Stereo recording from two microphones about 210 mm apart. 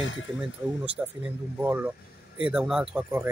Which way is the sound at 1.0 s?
10° right (ahead or behind).